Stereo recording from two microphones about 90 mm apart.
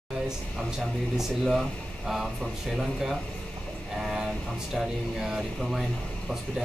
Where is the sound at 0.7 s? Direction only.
5° right (ahead or behind).